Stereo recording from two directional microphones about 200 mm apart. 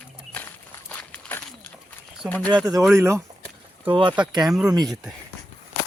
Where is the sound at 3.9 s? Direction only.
25° right (ahead or behind).